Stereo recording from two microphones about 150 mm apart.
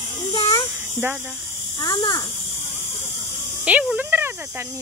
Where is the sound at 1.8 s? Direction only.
25° left (ahead or behind).